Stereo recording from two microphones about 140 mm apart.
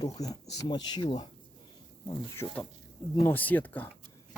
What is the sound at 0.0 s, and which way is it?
Speech, 25° left (ahead or behind).